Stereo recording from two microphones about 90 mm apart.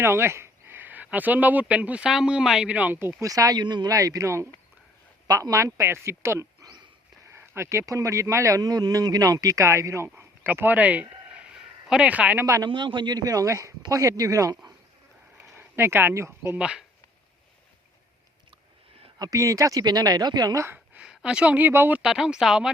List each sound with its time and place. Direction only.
0.0 s speech: 30° right (ahead or behind)
3.2 s speech: 40° right (ahead or behind)
3.6 s a man's voice: 55° right (ahead or behind); by 11.4 s 15° right (ahead or behind)
11.5 s a sound: 10° right (ahead or behind)
12.6 s speech: 60° right (ahead or behind); by 14.7 s 40° right (ahead or behind)
15.5 s speech: 25° right (ahead or behind)
16.6 s speech: 10° right (ahead or behind)
19.2 s speech: 40° right (ahead or behind)
20.7 s a sound: 10° right (ahead or behind)
21.7 s speech: 25° right (ahead or behind)
22.0 s speech: 5° right (ahead or behind)